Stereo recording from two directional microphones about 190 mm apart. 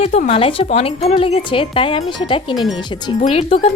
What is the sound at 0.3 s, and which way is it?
Speech, 30° left (ahead or behind).